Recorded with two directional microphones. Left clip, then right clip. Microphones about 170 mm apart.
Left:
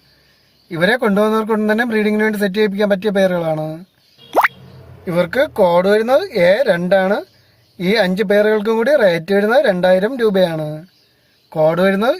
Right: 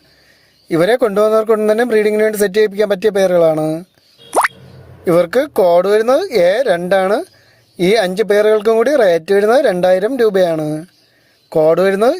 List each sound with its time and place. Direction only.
0.7 s speech: 50° right (ahead or behind)
4.3 s plop: 5° left (ahead or behind)
5.0 s speech: 45° right (ahead or behind)